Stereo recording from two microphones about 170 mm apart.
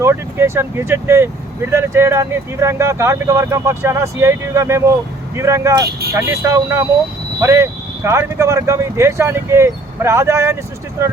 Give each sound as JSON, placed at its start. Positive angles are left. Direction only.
{"t": 0.0, "sound": "speech", "side_deg": -15}